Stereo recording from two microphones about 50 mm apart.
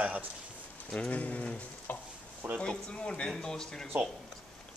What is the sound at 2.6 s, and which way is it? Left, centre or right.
Speech, left.